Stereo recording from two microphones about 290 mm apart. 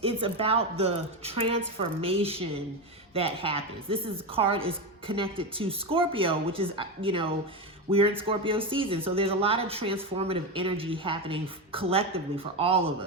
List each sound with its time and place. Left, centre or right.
0.0 s speech: centre